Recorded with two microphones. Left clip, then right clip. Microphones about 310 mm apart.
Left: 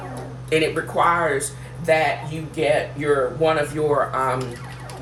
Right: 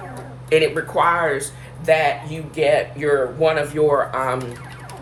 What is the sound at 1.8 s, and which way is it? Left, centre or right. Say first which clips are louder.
Speech: right 2 dB; centre.